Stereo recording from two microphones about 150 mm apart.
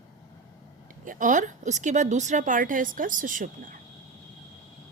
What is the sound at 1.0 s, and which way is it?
A woman's voice, 60° right (ahead or behind).